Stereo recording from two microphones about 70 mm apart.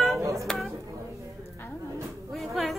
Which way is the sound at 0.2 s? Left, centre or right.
Right.